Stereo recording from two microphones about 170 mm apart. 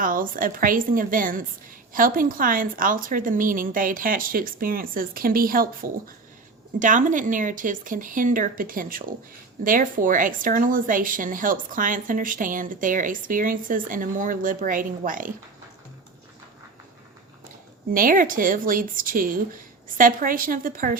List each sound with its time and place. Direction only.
0.0 s a woman's voice: 55° right (ahead or behind)
17.9 s a woman's voice: 55° right (ahead or behind)